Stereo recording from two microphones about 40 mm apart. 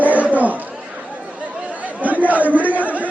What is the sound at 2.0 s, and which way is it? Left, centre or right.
Chatter, right.